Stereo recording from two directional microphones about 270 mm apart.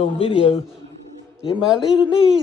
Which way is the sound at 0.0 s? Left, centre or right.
Left.